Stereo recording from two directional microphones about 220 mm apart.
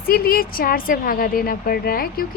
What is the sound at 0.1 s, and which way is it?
A woman's voice, 45° left (ahead or behind).